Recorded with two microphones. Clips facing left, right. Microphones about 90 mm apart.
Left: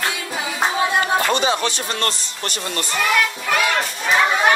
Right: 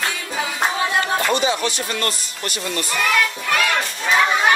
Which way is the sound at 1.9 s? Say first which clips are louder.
Left 1 dB; 30° left (ahead or behind).